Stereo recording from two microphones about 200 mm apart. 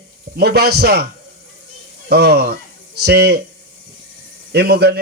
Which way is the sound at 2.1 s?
55° right (ahead or behind).